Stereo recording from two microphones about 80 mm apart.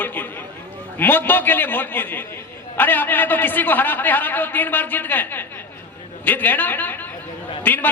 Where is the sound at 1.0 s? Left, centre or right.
Left.